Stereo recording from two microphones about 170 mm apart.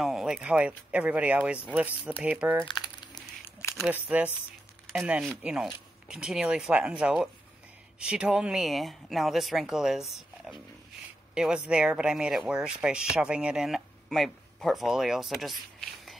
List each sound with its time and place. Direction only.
0.0 s speech: 5° right (ahead or behind)
2.6 s crumpling: 25° left (ahead or behind)
3.7 s speech: 5° right (ahead or behind)